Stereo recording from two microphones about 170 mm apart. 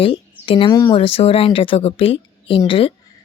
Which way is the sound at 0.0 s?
30° left (ahead or behind).